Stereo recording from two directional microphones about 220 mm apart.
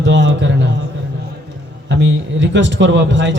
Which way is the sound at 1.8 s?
55° right (ahead or behind).